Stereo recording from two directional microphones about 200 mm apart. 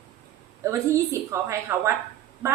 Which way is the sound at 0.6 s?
15° right (ahead or behind).